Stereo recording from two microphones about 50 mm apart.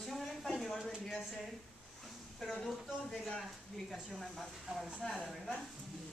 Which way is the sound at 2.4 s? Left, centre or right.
Centre.